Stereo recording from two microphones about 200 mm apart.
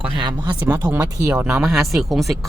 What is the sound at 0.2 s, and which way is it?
Speech, 20° right (ahead or behind).